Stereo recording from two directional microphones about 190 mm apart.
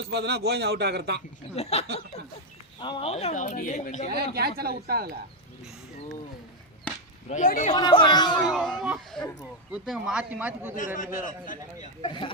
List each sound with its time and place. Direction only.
0.1 s a man's voice: 60° right (ahead or behind)
1.5 s a woman's voice: 35° left (ahead or behind)
4.1 s speech: 55° right (ahead or behind)
7.3 s a woman's voice: 40° left (ahead or behind)
7.7 s speech: 20° left (ahead or behind)
8.4 s speech: centre (ahead or behind)
10.8 s a man's voice: 45° left (ahead or behind)
12.0 s speech: 25° left (ahead or behind)